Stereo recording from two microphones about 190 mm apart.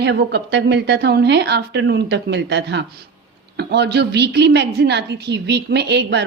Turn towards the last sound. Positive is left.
turn(degrees=-60)  # may be behind; listen again after turning